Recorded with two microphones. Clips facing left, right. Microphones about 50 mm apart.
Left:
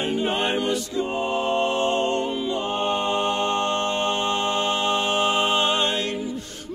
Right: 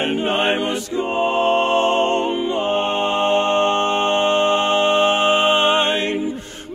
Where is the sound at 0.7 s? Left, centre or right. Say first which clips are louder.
Right 3 dB; right.